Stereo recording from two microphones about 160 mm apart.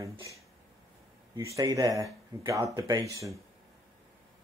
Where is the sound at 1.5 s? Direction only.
20° right (ahead or behind).